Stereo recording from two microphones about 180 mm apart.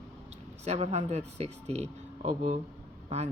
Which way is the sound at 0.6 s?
35° right (ahead or behind).